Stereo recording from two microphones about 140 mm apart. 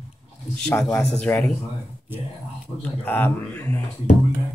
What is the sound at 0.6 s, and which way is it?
Speech, 5° left (ahead or behind).